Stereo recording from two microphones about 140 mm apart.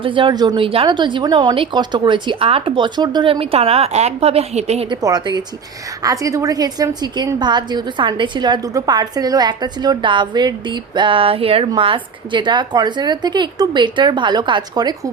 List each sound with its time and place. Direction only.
0.0 s a woman's voice: 35° right (ahead or behind)
4.9 s a woman's voice: 25° right (ahead or behind)